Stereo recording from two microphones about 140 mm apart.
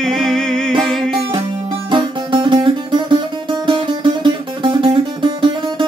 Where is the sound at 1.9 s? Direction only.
35° right (ahead or behind).